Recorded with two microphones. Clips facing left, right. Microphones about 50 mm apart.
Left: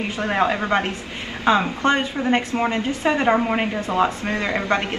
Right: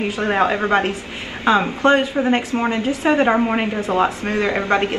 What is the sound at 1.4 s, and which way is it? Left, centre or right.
Speech, centre.